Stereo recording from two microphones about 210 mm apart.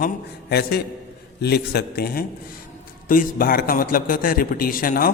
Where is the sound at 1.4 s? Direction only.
50° left (ahead or behind).